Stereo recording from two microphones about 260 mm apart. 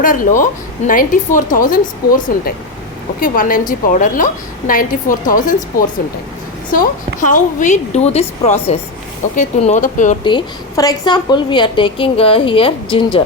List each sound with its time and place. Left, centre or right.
0.0 s a woman's voice: left
6.7 s a woman's voice: left
10.2 s a woman's voice: centre